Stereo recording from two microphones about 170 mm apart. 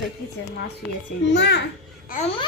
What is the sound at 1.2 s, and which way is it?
Speech, 90° left.